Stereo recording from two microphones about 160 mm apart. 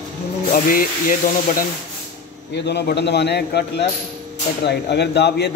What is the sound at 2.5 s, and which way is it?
A man's voice, 90° left.